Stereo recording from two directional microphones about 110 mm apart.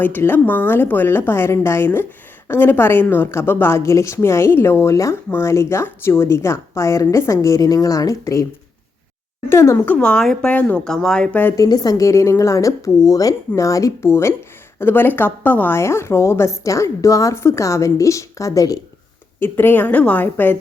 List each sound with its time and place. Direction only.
0.0 s a woman's voice: 20° left (ahead or behind)
9.5 s a woman's voice: 25° left (ahead or behind)
10.0 s speech: 5° left (ahead or behind)
11.5 s a woman's voice: 35° left (ahead or behind)
19.4 s speech: 20° left (ahead or behind)